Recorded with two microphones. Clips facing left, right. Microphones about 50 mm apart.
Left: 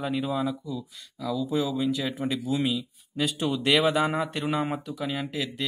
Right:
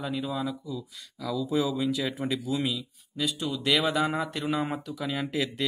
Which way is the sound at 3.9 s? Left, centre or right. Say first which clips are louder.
Left 2 dB; left.